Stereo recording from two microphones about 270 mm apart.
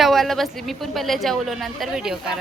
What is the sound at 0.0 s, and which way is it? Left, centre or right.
Speech, centre.